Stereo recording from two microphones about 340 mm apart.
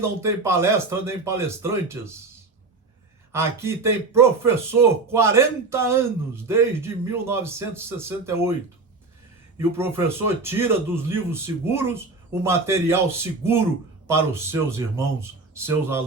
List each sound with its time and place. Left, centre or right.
0.0 s a man's voice: centre
3.3 s a man's voice: centre
9.6 s a man's voice: centre